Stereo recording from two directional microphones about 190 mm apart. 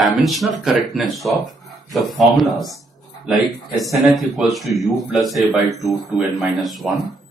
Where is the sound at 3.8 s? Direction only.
Centre (ahead or behind).